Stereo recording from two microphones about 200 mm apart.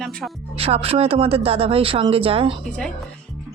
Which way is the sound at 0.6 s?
30° right (ahead or behind).